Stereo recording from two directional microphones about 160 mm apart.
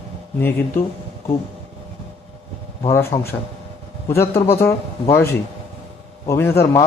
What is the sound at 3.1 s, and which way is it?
Speech, 40° left (ahead or behind).